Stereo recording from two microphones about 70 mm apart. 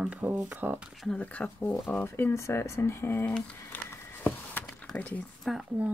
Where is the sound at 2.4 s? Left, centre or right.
Left.